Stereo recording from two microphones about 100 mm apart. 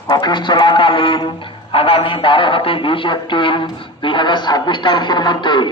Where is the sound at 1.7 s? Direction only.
65° left (ahead or behind).